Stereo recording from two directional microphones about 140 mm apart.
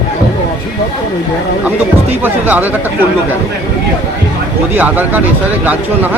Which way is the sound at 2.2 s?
10° right (ahead or behind).